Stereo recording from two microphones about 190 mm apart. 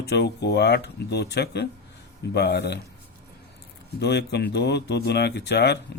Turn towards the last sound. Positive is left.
turn(degrees=60)  # may be behind; listen again after turning